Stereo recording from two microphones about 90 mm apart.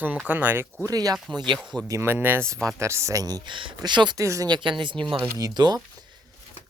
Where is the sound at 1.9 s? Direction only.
30° right (ahead or behind).